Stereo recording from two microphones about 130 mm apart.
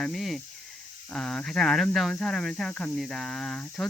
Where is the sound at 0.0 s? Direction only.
Centre (ahead or behind).